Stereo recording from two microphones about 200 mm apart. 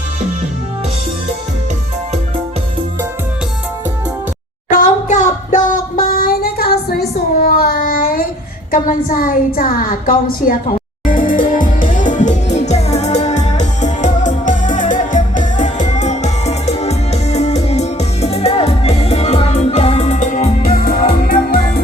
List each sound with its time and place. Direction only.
4.7 s singing: 40° left (ahead or behind)
8.7 s a woman's voice: 45° left (ahead or behind)
11.4 s music: 45° left (ahead or behind)